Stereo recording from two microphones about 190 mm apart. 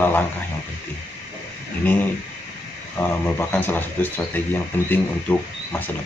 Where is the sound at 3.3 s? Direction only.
10° left (ahead or behind).